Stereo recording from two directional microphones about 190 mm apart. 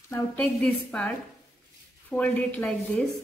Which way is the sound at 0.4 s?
5° left (ahead or behind).